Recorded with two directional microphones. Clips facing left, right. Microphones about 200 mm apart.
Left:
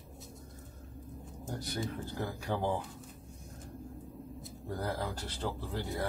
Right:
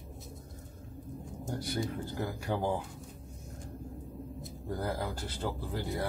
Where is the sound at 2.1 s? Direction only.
10° right (ahead or behind).